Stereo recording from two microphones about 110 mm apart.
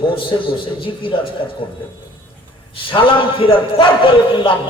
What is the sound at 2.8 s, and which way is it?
A man's voice, 50° left (ahead or behind).